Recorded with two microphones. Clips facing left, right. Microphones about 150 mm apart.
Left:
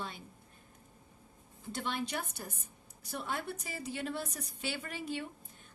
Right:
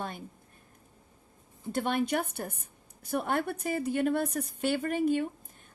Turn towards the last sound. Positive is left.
turn(degrees=-50)  # may be behind; listen again after turning